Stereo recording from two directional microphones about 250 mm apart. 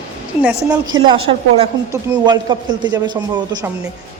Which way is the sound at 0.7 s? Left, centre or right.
Centre.